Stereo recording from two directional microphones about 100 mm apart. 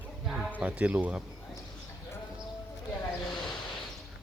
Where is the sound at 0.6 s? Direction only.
15° right (ahead or behind).